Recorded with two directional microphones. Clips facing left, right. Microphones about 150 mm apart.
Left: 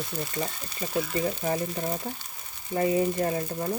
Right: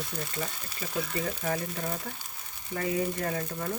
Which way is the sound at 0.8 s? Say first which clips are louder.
Left 5 dB; 25° left (ahead or behind).